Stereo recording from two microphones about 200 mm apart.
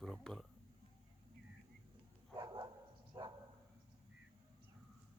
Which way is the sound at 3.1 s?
20° right (ahead or behind).